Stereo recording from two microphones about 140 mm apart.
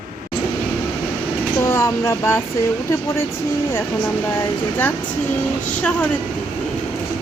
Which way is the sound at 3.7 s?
20° left (ahead or behind).